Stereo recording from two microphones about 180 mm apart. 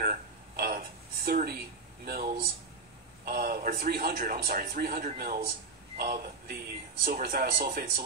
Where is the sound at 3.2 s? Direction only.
55° right (ahead or behind).